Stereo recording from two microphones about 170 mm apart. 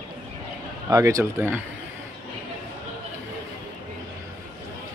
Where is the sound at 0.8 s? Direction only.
20° right (ahead or behind).